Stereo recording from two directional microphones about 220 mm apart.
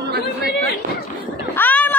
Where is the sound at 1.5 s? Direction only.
10° left (ahead or behind).